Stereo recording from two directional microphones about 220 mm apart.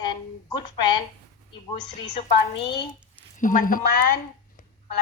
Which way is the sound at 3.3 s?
35° left (ahead or behind).